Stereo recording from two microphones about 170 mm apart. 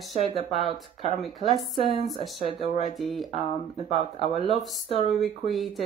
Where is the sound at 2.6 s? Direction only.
40° left (ahead or behind).